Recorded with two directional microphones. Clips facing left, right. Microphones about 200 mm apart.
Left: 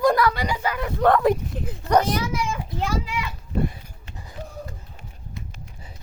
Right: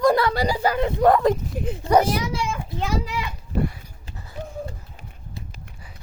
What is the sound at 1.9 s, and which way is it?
Speech, 10° right (ahead or behind).